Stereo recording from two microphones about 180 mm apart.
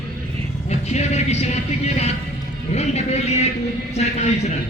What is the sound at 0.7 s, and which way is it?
Speech, 40° left (ahead or behind).